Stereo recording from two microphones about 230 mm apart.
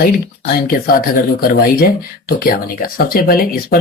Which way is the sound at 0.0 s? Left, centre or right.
Left.